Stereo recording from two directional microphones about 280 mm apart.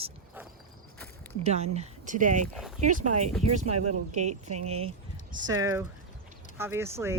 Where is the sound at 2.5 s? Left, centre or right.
Centre.